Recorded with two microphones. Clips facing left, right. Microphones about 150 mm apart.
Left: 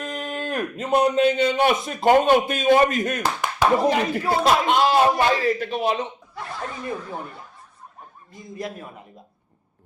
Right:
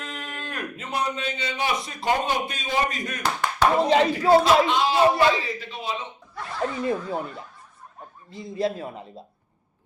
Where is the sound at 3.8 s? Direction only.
25° right (ahead or behind).